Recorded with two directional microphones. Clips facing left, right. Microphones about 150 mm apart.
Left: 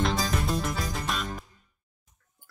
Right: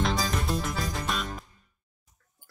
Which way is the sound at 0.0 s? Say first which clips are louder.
Left 1 dB; centre (ahead or behind).